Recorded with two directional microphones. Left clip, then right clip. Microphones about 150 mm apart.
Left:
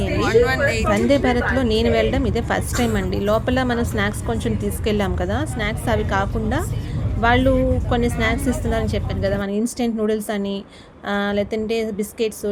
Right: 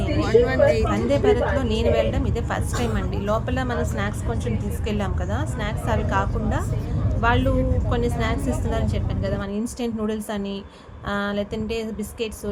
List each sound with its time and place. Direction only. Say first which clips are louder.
0.2 s speech: left 1 dB; 15° right (ahead or behind)
0.9 s a woman's voice: left 2 dB; 40° left (ahead or behind)